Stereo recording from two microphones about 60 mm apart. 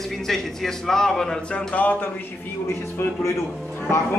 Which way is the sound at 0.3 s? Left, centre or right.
Centre.